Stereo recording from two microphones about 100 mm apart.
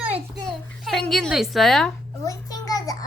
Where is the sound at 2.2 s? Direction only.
35° left (ahead or behind).